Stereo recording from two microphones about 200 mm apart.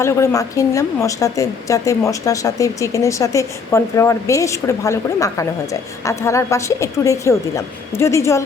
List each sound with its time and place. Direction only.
0.0 s a woman's voice: 15° left (ahead or behind)